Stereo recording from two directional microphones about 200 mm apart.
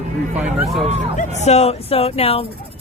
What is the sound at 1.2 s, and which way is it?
Speech, 35° left (ahead or behind).